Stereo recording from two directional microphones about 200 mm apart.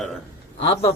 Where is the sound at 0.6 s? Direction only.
30° left (ahead or behind).